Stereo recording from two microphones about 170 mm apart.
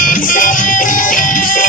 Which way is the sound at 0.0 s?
55° left (ahead or behind).